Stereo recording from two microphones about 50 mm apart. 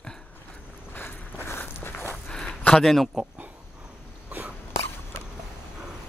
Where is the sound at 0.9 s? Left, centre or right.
Left.